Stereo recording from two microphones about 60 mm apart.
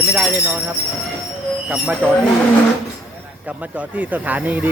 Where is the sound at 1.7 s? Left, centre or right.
Right.